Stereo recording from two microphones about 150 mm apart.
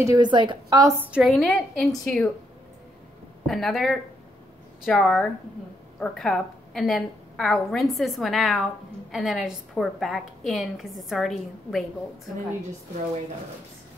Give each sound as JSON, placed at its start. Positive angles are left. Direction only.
{"t": 0.0, "sound": "a woman's voice", "side_deg": -25}
{"t": 0.9, "sound": "a woman's voice", "side_deg": -10}
{"t": 3.4, "sound": "a woman's voice", "side_deg": 0}